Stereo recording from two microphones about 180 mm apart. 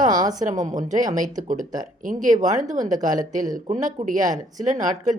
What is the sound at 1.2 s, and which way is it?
Speech, 45° right (ahead or behind).